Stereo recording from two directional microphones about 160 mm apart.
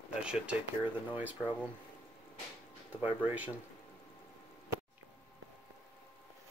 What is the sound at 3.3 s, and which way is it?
Speech, 10° right (ahead or behind).